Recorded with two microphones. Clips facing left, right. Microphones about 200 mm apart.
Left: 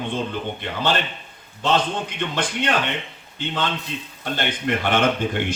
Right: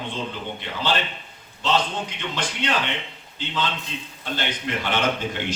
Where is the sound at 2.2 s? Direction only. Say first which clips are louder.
Left 4 dB; 55° left (ahead or behind).